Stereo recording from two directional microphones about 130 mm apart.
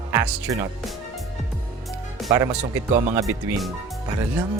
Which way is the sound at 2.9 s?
75° right (ahead or behind).